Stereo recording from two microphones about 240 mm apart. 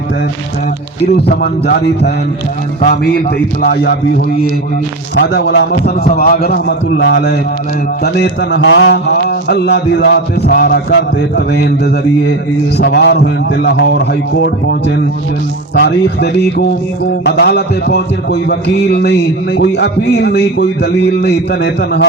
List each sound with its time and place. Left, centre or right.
1.4 s a man's voice: left
5.1 s mantra: left
12.7 s mantra: left